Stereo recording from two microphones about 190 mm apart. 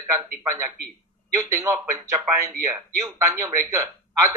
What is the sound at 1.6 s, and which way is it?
A man's voice, 15° right (ahead or behind).